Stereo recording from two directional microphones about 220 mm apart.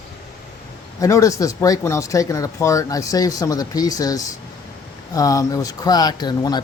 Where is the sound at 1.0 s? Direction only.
15° left (ahead or behind).